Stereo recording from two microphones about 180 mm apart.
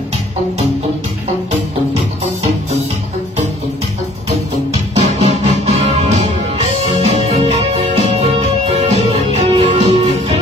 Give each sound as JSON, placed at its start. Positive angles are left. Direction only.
{"t": 4.9, "sound": "music", "side_deg": -35}